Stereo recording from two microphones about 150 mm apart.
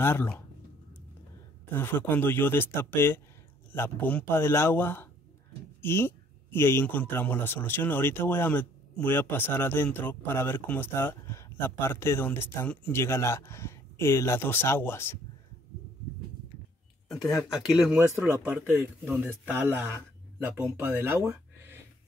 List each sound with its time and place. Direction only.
0.0 s speech: 15° left (ahead or behind)
1.7 s speech: 15° left (ahead or behind)
17.4 s speech: centre (ahead or behind)
17.9 s speech: 15° right (ahead or behind)